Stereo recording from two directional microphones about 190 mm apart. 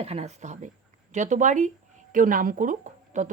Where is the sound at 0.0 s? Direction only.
35° right (ahead or behind).